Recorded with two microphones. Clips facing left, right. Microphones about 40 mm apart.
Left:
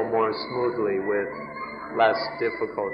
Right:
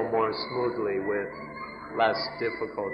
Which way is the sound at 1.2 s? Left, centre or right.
Centre.